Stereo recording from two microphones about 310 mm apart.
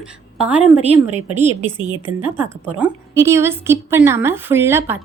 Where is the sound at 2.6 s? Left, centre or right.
Centre.